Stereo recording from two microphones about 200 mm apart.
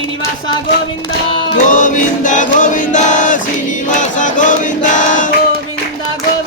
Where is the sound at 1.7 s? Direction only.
40° left (ahead or behind).